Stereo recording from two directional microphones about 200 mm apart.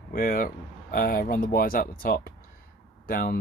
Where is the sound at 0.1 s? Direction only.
45° left (ahead or behind).